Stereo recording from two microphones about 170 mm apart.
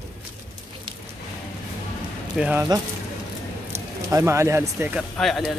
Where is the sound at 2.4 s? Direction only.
10° right (ahead or behind).